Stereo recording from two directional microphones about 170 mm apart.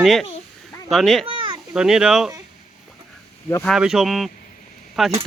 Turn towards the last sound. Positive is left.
turn(degrees=0)  # may be behind; listen again after turning